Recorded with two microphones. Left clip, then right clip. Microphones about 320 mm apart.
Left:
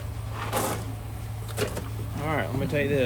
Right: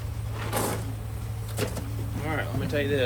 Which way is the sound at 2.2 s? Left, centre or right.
Left.